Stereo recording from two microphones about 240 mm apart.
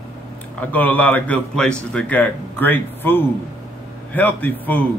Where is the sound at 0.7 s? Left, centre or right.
Centre.